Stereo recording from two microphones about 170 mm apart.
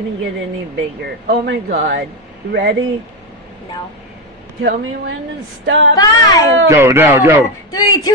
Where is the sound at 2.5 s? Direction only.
70° right (ahead or behind).